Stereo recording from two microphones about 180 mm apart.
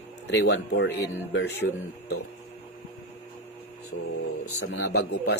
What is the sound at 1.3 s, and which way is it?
Speech, 70° left (ahead or behind).